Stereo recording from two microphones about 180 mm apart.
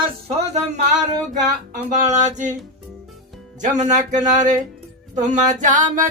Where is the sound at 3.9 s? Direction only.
45° right (ahead or behind).